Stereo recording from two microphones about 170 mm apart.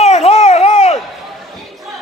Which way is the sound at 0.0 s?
40° left (ahead or behind).